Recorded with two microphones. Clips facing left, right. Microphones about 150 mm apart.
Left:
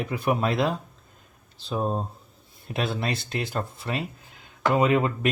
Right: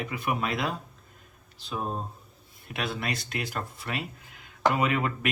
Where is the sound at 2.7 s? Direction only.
30° left (ahead or behind).